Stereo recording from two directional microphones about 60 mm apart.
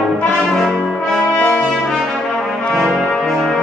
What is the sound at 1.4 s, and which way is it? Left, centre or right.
Brass instrument, left.